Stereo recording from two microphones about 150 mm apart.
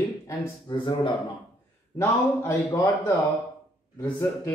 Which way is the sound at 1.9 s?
20° left (ahead or behind).